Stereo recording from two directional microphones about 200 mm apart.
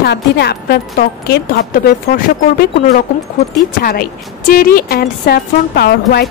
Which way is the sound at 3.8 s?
50° left (ahead or behind).